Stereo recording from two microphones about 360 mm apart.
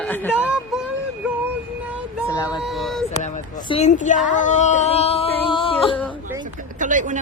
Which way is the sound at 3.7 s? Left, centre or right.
Centre.